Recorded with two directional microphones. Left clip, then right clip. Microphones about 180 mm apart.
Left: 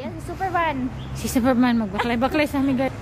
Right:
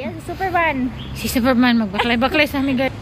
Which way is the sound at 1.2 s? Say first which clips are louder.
Right 3 dB; 15° left (ahead or behind).